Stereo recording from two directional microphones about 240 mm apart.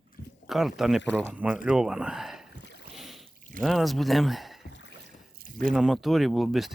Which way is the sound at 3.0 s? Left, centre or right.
Centre.